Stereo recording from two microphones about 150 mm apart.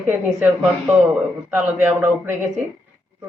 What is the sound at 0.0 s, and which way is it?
Speech, 10° right (ahead or behind).